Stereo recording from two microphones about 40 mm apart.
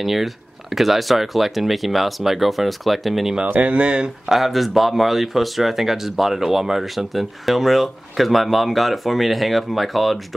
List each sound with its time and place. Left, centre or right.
0.0 s speech: centre
3.4 s speech: right
3.7 s speech: right
4.3 s speech: centre